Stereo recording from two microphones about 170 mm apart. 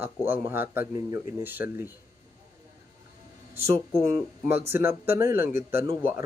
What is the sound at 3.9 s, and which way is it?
Speech, 15° right (ahead or behind).